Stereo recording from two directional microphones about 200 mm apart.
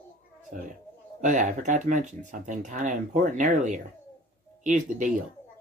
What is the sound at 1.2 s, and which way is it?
Speech, 40° right (ahead or behind).